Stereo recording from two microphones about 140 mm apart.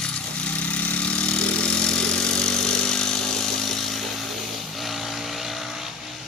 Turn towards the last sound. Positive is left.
turn(degrees=0)  # may be behind; listen again after turning